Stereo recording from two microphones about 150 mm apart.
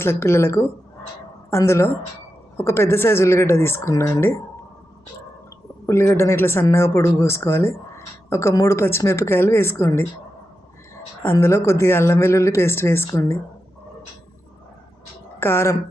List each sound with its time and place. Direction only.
0.0 s speech: 15° left (ahead or behind)
5.8 s speech: 15° left (ahead or behind)
11.2 s speech: 15° left (ahead or behind)
15.4 s speech: 15° left (ahead or behind)